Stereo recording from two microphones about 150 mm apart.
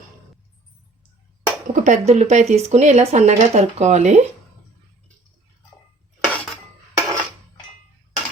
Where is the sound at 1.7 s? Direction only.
50° right (ahead or behind).